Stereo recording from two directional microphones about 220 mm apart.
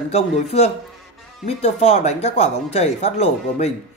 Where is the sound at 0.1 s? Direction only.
30° left (ahead or behind).